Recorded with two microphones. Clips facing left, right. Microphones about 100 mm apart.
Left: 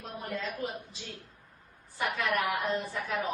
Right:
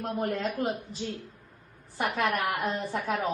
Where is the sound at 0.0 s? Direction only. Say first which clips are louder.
Right 7 dB; 60° right (ahead or behind).